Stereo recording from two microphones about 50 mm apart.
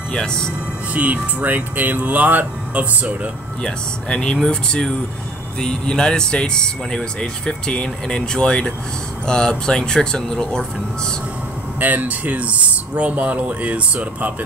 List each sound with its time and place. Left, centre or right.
0.1 s speech: centre
0.9 s speech: right
3.6 s speech: centre
11.8 s speech: right